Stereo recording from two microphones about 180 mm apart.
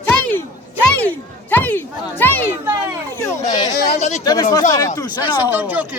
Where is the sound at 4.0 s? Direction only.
40° left (ahead or behind).